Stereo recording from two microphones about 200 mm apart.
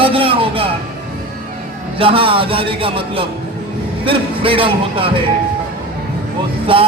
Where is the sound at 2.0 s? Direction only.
25° right (ahead or behind).